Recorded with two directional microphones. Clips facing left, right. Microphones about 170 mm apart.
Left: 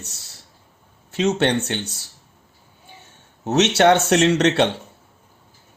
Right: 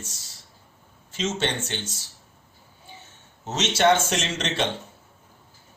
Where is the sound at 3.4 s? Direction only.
65° left (ahead or behind).